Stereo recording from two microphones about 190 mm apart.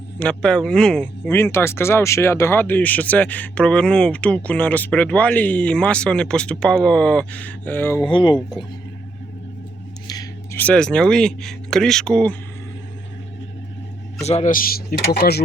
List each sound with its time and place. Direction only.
0.2 s speech: 5° left (ahead or behind)
8.0 s speech: 25° left (ahead or behind)
10.1 s a sound: 20° left (ahead or behind)
10.6 s speech: 5° left (ahead or behind)
14.3 s speech: 35° left (ahead or behind); by 15.4 s 55° left (ahead or behind)